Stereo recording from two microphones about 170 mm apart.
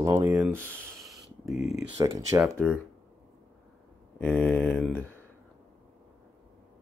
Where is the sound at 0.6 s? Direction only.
5° left (ahead or behind).